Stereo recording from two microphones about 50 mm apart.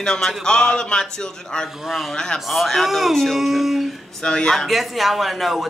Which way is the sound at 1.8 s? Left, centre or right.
Centre.